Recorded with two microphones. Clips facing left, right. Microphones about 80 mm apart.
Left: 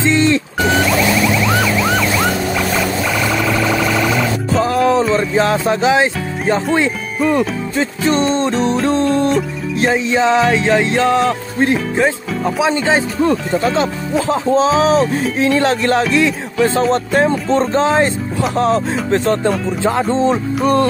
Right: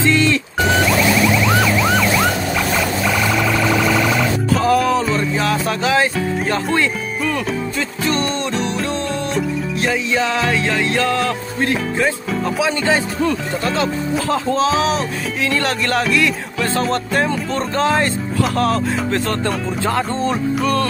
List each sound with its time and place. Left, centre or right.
0.0 s music: left
1.3 s police car: centre
3.1 s siren: centre
4.6 s music: left
9.8 s music: left
15.5 s music: centre